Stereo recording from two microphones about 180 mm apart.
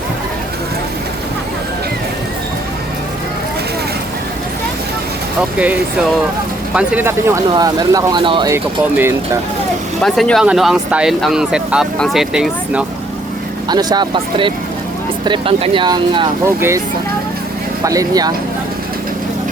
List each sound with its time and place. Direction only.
5.4 s speech: 5° right (ahead or behind); by 8.4 s 25° right (ahead or behind)
8.4 s speech: 15° right (ahead or behind)
10.0 s speech: centre (ahead or behind)
13.7 s speech: 25° right (ahead or behind)
16.6 s speech: 15° right (ahead or behind)
17.8 s speech: 20° right (ahead or behind)